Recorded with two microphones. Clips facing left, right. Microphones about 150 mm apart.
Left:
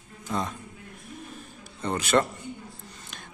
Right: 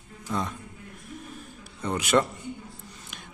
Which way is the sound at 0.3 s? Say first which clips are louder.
Even; 15° left (ahead or behind).